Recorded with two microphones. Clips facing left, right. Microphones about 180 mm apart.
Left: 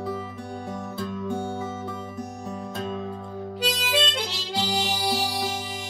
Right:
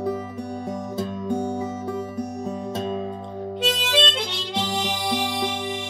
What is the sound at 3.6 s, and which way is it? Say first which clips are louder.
Harmonica: right 3 dB; 5° left (ahead or behind).